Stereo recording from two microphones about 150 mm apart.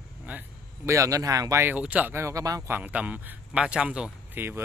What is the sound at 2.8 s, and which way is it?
Speech, 10° right (ahead or behind).